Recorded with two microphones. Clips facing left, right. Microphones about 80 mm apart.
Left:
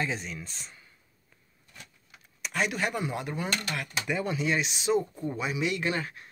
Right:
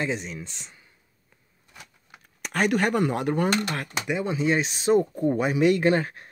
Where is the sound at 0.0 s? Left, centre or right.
Right.